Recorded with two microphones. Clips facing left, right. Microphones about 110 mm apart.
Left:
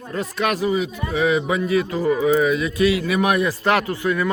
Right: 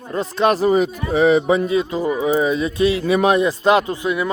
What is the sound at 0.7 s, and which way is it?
Speech, 50° right (ahead or behind).